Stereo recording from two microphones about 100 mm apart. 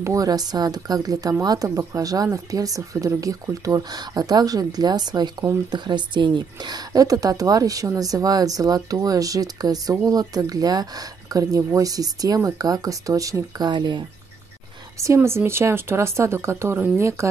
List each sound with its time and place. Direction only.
0.0 s a woman's voice: 35° right (ahead or behind)
13.7 s speech: 50° right (ahead or behind)
15.1 s speech: 25° right (ahead or behind)